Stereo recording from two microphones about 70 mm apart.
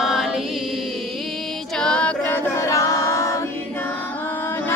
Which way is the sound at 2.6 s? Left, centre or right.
Left.